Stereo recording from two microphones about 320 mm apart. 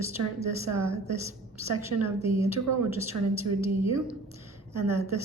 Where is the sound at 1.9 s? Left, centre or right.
Right.